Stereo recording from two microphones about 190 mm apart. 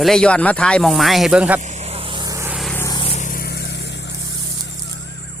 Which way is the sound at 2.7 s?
15° left (ahead or behind).